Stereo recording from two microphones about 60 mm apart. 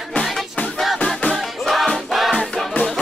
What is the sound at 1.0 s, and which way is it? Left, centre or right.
Music, centre.